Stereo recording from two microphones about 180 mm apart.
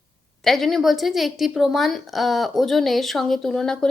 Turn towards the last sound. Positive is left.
turn(degrees=5)  # may be behind; listen again after turning